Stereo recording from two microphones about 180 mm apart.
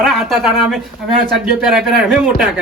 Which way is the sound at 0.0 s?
Centre (ahead or behind).